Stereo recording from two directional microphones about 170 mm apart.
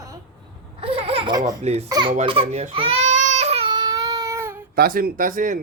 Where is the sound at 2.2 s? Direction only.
30° right (ahead or behind); by 4.7 s 15° right (ahead or behind).